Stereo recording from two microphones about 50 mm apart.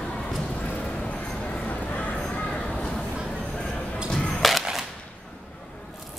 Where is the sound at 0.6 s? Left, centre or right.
Left.